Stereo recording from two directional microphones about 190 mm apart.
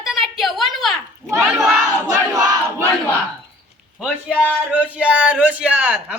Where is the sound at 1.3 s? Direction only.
15° right (ahead or behind).